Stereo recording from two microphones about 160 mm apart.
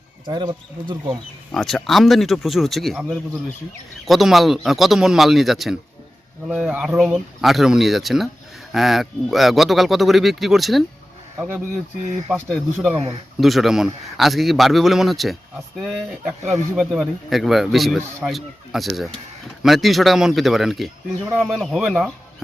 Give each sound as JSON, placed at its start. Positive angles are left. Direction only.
{"t": 0.3, "sound": "speech", "side_deg": -30}
{"t": 1.5, "sound": "a man's voice", "side_deg": 0}
{"t": 11.3, "sound": "speech", "side_deg": -10}
{"t": 12.3, "sound": "a man's voice", "side_deg": 0}